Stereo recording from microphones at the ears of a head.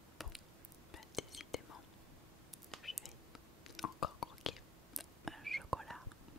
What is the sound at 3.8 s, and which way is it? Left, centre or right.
Whispering, left.